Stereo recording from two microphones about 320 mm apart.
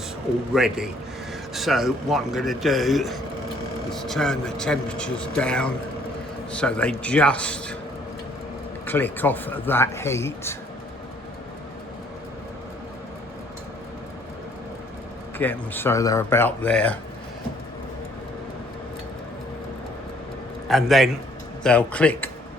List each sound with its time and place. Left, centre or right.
0.5 s speech: centre
8.9 s speech: centre
15.4 s speech: centre
20.7 s a man's voice: centre